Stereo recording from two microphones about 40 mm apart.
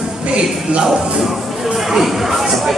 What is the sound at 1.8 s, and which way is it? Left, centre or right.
Speech, centre.